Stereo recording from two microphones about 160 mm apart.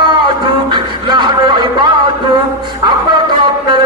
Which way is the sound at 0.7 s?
30° right (ahead or behind).